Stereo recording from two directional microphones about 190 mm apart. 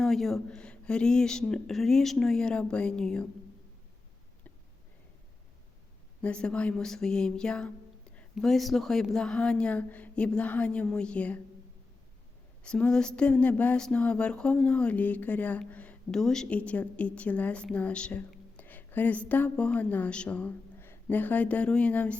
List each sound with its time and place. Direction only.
0.0 s speech: centre (ahead or behind)
6.2 s speech: 5° left (ahead or behind)
12.6 s a sound: 5° left (ahead or behind)